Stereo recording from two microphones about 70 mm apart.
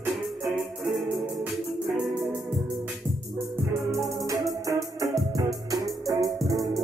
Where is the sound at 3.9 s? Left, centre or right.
Right.